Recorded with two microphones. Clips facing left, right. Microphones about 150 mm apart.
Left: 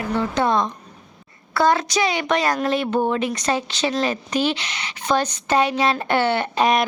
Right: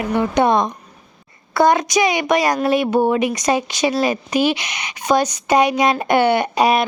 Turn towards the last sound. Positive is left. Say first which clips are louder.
# right 3 dB
turn(degrees=-10)  # may be behind; listen again after turning